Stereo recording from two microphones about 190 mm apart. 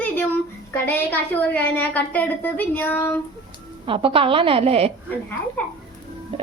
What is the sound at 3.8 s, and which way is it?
A child's voice, 30° right (ahead or behind).